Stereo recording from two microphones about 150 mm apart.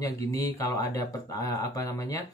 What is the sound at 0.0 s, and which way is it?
Speech, 20° left (ahead or behind).